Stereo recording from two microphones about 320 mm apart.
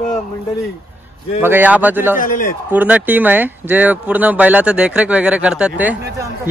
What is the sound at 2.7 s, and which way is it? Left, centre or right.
Speech, centre.